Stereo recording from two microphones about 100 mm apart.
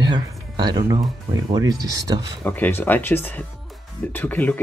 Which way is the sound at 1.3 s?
40° right (ahead or behind).